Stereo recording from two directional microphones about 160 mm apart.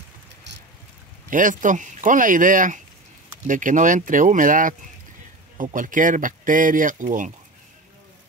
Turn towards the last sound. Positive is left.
turn(degrees=-55)  # may be behind; listen again after turning